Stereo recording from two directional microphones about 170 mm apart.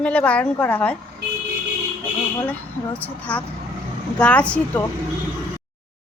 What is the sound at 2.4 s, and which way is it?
Speech, 10° left (ahead or behind).